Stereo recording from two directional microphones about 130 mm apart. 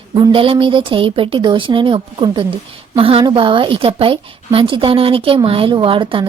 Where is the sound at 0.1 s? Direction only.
40° right (ahead or behind).